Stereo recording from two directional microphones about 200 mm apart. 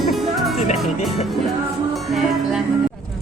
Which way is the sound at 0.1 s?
Centre (ahead or behind).